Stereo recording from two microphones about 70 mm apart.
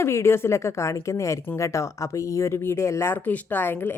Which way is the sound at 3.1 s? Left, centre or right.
Left.